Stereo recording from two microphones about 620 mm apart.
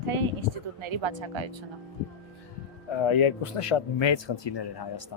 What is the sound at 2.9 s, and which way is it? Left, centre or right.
Speech, left.